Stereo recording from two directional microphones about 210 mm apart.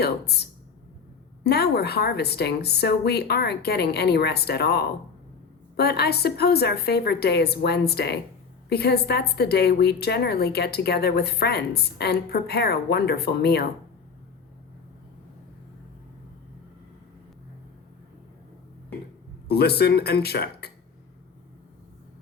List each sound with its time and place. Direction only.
0.0 s a woman's voice: 50° left (ahead or behind)
1.5 s a woman's voice: 50° left (ahead or behind)
19.5 s a woman's voice: 50° left (ahead or behind)